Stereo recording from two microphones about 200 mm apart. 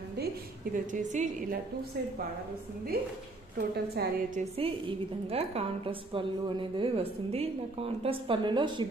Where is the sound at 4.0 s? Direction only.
50° right (ahead or behind).